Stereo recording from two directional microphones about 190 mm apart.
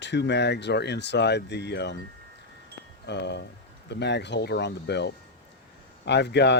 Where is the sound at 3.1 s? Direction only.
65° left (ahead or behind).